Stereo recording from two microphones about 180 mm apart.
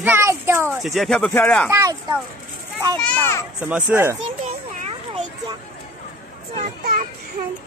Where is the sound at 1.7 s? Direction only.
15° right (ahead or behind).